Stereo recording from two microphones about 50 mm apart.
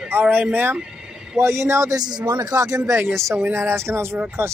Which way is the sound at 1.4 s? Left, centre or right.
Right.